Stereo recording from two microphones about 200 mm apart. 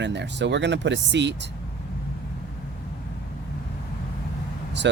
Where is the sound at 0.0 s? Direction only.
60° right (ahead or behind).